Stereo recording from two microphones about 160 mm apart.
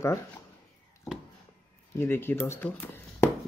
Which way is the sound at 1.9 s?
15° left (ahead or behind).